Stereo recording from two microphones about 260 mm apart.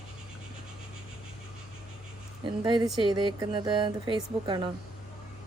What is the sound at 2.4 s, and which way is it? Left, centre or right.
Speech, centre.